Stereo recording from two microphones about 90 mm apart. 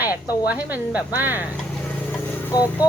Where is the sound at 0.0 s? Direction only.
20° right (ahead or behind).